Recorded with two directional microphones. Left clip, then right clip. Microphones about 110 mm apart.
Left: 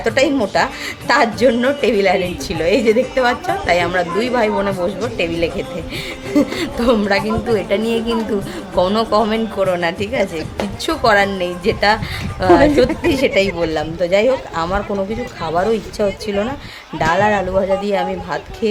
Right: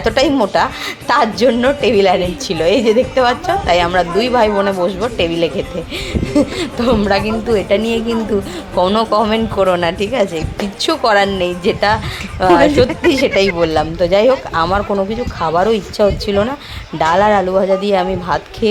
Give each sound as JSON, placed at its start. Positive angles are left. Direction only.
{"t": 0.0, "sound": "a woman's voice", "side_deg": -20}
{"t": 1.5, "sound": "a woman's voice", "side_deg": -5}
{"t": 5.1, "sound": "a woman's voice", "side_deg": -20}
{"t": 6.3, "sound": "speech", "side_deg": 0}
{"t": 7.1, "sound": "a woman's voice", "side_deg": -15}
{"t": 9.0, "sound": "a woman's voice", "side_deg": -15}